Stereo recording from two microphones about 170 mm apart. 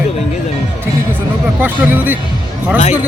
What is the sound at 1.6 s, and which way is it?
Speech, 10° right (ahead or behind).